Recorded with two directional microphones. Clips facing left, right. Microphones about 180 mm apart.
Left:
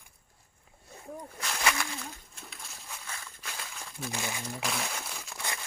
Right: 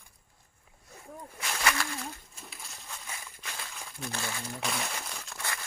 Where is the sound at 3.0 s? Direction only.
15° right (ahead or behind).